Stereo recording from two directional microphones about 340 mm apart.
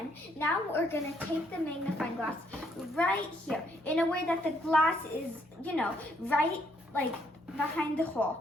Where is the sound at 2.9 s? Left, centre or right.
Centre.